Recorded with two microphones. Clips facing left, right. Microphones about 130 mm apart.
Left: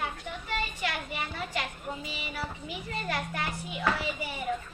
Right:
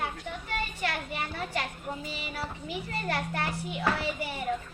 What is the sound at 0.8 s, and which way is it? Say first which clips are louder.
A child's voice: right 1 dB; 45° right (ahead or behind).